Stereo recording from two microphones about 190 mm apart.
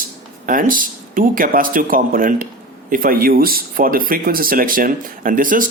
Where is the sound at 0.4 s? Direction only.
45° right (ahead or behind).